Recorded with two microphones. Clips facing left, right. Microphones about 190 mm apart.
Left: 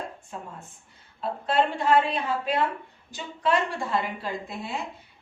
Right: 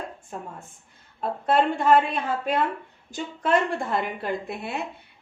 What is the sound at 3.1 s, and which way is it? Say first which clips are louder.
A woman's voice: right 2 dB; 50° right (ahead or behind).